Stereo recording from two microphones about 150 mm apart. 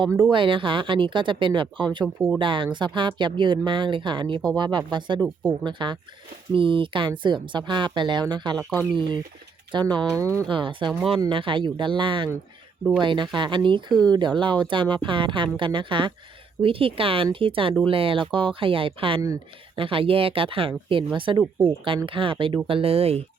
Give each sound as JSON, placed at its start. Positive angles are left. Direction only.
{"t": 0.3, "sound": "speech", "side_deg": -35}
{"t": 8.5, "sound": "speech", "side_deg": 10}
{"t": 9.7, "sound": "speech", "side_deg": -30}